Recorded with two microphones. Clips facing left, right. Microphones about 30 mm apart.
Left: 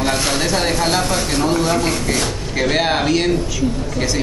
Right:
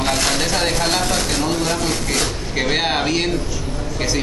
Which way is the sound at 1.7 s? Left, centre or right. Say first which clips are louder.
Left 3 dB; left.